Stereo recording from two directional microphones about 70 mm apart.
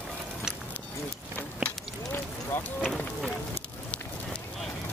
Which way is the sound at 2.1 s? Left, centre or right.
Left.